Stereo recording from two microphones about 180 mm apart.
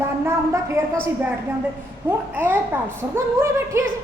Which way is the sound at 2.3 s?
10° right (ahead or behind).